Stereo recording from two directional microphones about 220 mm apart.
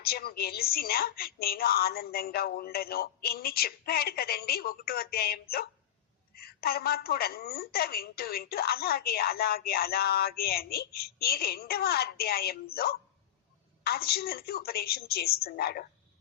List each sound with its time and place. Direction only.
0.0 s a woman's voice: 45° left (ahead or behind)